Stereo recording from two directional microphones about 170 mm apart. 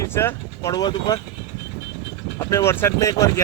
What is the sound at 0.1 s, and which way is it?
Speech, 15° left (ahead or behind).